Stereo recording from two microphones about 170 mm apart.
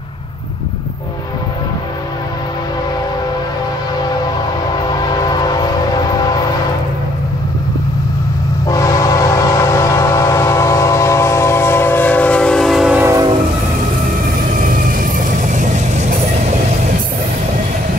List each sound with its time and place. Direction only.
4.8 s train: 25° left (ahead or behind)
8.6 s train: 20° left (ahead or behind); by 13.0 s centre (ahead or behind)
13.0 s train: 20° right (ahead or behind)
14.6 s vehicle: 55° right (ahead or behind)